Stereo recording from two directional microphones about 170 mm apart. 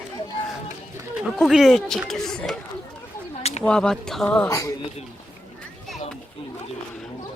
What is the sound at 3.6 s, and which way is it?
Speech, 5° left (ahead or behind).